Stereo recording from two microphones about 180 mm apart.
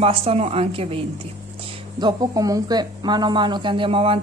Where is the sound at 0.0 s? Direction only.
35° right (ahead or behind).